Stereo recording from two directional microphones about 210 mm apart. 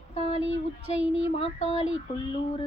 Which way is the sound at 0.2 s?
30° left (ahead or behind).